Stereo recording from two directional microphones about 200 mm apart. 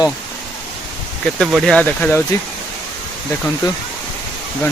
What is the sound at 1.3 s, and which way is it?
Speech, centre (ahead or behind).